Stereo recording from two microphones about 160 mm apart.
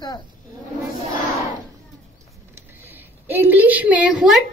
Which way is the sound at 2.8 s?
15° right (ahead or behind).